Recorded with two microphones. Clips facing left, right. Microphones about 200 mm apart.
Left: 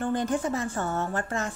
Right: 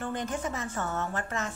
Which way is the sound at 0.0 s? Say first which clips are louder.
Left 6 dB; 30° left (ahead or behind).